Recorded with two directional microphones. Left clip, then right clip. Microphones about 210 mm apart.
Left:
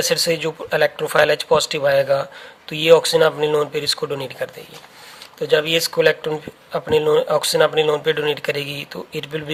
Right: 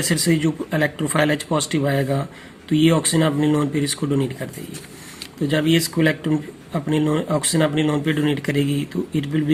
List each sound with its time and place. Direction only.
0.0 s speech: 40° left (ahead or behind)
5.5 s speech: 35° left (ahead or behind)